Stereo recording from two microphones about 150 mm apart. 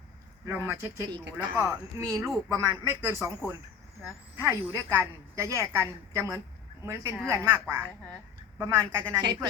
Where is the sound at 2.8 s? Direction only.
20° right (ahead or behind).